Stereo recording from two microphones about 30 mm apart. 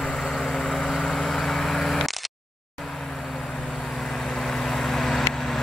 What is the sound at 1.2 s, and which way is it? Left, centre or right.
Vehicle, centre.